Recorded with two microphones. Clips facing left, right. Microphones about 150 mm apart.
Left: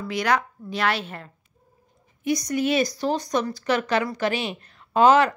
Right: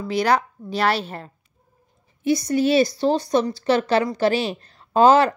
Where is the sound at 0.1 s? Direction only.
35° right (ahead or behind).